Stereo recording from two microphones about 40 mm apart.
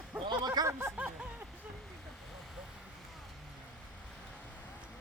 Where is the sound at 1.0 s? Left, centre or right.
Right.